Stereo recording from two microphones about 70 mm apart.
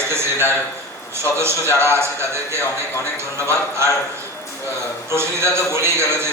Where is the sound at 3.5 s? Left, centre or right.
Right.